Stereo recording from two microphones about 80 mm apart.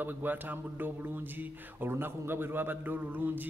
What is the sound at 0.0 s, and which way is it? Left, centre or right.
Speech, right.